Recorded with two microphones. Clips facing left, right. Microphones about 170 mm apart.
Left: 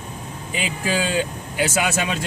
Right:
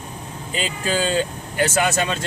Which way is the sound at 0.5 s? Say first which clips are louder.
Right 1 dB; 10° left (ahead or behind).